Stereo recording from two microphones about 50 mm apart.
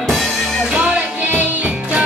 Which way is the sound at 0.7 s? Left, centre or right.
Right.